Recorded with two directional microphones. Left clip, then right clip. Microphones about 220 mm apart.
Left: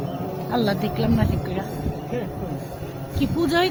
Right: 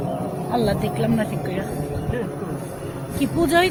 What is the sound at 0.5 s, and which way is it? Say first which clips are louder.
Speech: right 1 dB; 20° left (ahead or behind).